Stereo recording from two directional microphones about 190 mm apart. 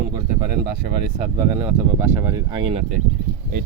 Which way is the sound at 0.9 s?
55° right (ahead or behind).